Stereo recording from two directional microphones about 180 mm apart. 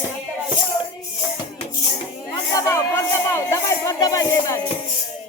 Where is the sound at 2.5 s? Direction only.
15° left (ahead or behind).